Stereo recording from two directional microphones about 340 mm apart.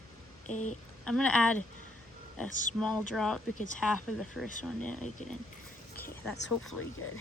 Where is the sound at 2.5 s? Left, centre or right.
Left.